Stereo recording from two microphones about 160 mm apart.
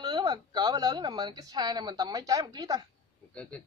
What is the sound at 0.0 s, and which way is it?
Speech, 25° right (ahead or behind).